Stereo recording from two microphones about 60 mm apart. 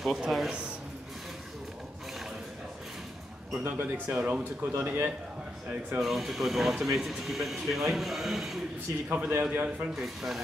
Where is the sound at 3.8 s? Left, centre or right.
Right.